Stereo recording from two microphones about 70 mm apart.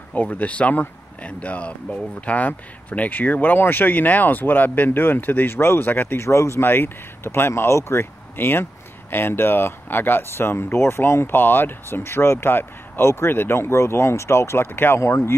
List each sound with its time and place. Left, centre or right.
0.1 s speech: left